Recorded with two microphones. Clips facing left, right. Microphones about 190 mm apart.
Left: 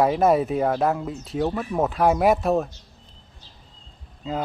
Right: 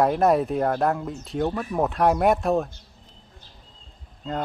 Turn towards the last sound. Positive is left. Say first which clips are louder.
# left 1 dB
turn(degrees=5)  # may be behind; listen again after turning